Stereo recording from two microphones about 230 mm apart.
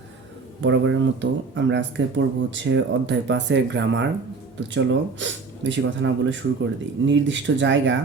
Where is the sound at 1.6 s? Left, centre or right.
Right.